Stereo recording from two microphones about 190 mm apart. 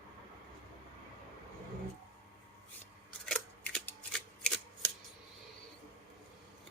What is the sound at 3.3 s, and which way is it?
Scissors, 5° left (ahead or behind).